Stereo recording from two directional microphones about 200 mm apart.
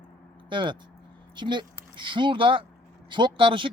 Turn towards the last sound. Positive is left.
turn(degrees=-25)  # may be behind; listen again after turning